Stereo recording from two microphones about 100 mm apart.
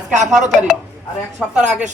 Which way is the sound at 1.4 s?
10° left (ahead or behind).